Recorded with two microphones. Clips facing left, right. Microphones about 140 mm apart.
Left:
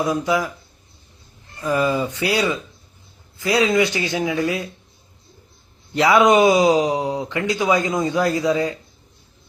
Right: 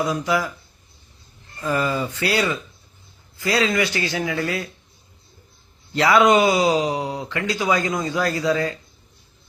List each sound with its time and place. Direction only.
0.0 s speech: 20° left (ahead or behind)
1.6 s speech: 15° left (ahead or behind)
5.9 s speech: 20° left (ahead or behind)